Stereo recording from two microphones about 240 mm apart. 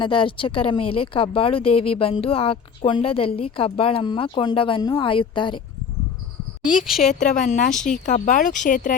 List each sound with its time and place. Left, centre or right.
0.0 s speech: centre
6.8 s a woman's voice: centre
7.1 s a woman's voice: left
7.7 s a woman's voice: centre
7.9 s a woman's voice: left